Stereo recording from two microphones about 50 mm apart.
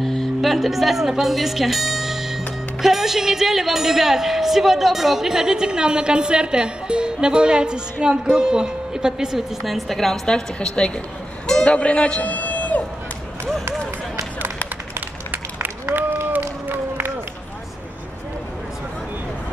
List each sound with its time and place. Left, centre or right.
0.0 s speech: centre
11.4 s music: centre
15.0 s run: right
16.3 s a sound: right